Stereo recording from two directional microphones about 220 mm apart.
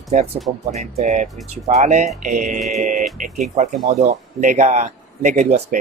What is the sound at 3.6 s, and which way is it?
Speech, 30° right (ahead or behind).